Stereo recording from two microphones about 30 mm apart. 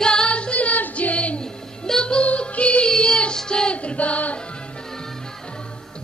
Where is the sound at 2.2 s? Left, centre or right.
Left.